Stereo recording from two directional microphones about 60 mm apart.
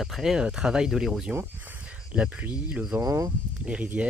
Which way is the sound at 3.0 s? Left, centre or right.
Right.